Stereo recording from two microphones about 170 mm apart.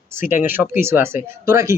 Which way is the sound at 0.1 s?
15° right (ahead or behind).